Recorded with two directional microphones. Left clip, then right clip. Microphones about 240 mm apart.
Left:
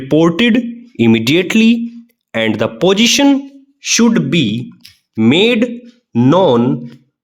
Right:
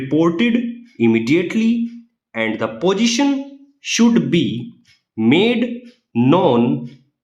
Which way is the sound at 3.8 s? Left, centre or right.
Left.